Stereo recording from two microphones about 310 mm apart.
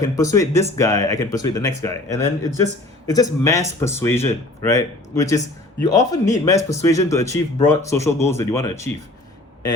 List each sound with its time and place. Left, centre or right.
0.0 s speech: centre